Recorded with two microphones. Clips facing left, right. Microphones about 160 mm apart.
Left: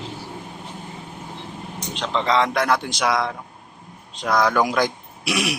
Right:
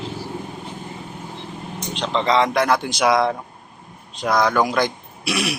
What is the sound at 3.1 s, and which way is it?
Speech, 30° right (ahead or behind).